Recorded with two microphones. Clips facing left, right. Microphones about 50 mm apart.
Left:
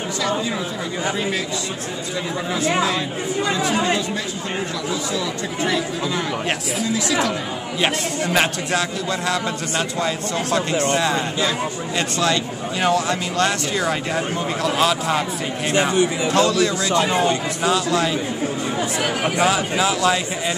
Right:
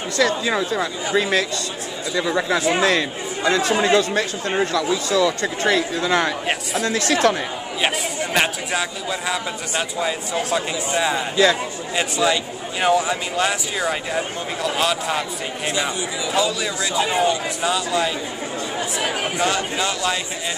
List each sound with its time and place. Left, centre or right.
1.1 s speech: right
2.8 s speech: right
6.8 s speech: right
7.8 s a man's voice: centre
16.3 s a man's voice: centre
18.8 s speech: centre